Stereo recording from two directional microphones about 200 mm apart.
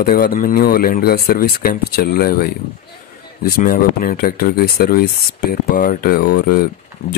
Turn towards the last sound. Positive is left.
turn(degrees=50)  # may be behind; listen again after turning